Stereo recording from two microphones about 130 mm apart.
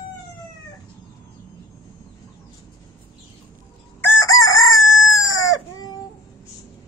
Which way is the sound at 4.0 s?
20° left (ahead or behind).